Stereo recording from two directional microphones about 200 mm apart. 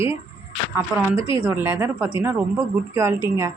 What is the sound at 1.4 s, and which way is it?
A woman's voice, 10° right (ahead or behind).